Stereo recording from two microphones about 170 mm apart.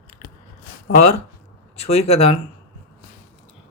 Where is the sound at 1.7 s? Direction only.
40° left (ahead or behind).